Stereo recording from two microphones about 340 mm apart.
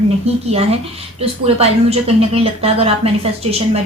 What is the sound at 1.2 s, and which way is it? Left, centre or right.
A woman's voice, centre.